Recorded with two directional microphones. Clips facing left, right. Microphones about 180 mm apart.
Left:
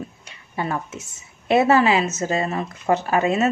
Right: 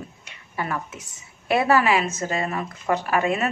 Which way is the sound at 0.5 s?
25° left (ahead or behind).